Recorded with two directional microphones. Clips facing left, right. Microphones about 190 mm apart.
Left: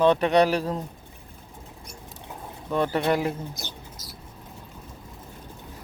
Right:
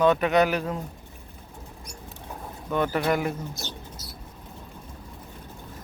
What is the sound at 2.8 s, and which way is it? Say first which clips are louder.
Speech: left 1 dB; 30° left (ahead or behind).